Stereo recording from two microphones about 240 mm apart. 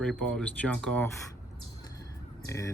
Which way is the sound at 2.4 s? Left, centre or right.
Centre.